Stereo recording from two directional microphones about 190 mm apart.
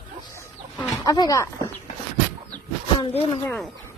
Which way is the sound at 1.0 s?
20° left (ahead or behind).